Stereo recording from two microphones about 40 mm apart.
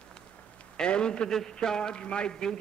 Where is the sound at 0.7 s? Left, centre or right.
Left.